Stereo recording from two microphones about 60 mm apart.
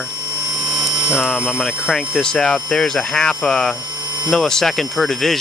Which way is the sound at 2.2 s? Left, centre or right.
Centre.